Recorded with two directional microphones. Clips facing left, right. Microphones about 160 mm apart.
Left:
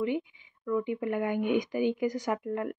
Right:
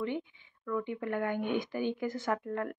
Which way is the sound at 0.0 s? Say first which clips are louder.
Left 5 dB; 10° left (ahead or behind).